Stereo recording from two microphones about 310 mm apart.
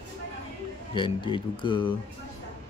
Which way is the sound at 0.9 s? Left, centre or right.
Centre.